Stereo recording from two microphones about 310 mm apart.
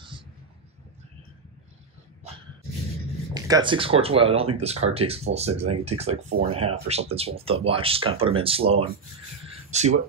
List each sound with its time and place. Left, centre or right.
3.3 s speech: centre